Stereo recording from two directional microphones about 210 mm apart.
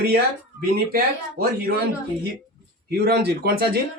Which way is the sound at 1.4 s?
45° right (ahead or behind).